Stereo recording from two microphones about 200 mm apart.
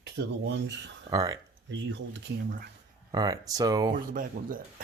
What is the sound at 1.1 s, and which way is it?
Speech, 20° right (ahead or behind).